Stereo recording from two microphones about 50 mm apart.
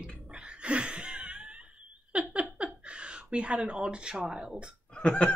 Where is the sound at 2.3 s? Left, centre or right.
Right.